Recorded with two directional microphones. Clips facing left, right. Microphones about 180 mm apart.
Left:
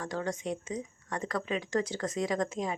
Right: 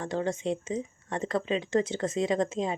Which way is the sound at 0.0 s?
25° right (ahead or behind).